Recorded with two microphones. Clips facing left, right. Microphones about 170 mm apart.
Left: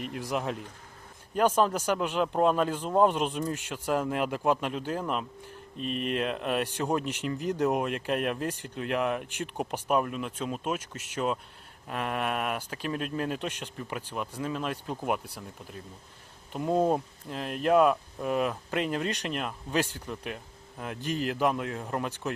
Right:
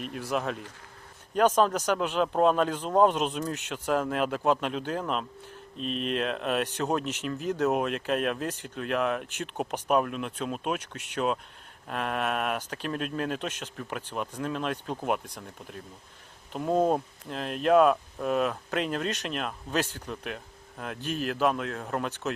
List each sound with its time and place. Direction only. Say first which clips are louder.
0.0 s speech: right 1 dB; 15° left (ahead or behind)
10.8 s speech: right 1 dB; 70° right (ahead or behind)
11.9 s speech: right 1 dB; 10° left (ahead or behind)
17.7 s speech: right 2 dB; 5° left (ahead or behind)